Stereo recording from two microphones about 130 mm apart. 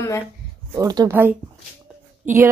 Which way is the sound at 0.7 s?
30° right (ahead or behind).